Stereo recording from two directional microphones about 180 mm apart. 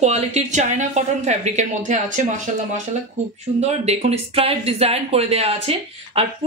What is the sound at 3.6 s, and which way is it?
Speech, 35° right (ahead or behind).